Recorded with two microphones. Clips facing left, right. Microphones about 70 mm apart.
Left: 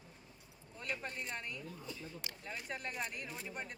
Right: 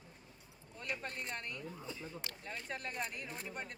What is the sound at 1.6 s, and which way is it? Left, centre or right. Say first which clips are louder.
Speech: right 1 dB; right.